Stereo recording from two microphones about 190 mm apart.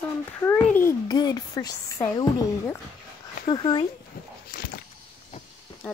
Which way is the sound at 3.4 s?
25° left (ahead or behind).